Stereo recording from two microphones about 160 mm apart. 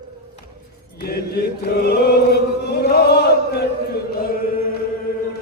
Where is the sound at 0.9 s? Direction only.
80° left.